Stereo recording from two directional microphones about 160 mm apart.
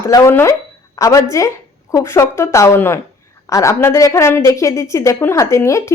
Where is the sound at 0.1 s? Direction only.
15° left (ahead or behind).